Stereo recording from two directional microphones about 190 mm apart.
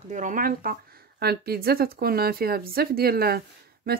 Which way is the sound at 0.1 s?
45° right (ahead or behind).